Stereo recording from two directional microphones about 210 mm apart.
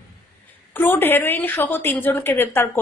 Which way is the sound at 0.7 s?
10° left (ahead or behind).